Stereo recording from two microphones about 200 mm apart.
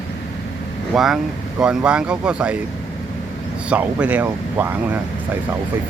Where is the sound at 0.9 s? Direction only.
Centre (ahead or behind).